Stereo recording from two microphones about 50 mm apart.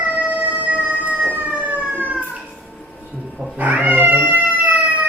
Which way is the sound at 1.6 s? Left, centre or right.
Right.